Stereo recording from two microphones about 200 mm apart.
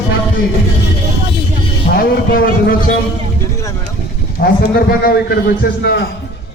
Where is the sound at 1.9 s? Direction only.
45° left (ahead or behind).